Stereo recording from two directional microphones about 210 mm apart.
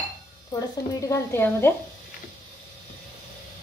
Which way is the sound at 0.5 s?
15° left (ahead or behind).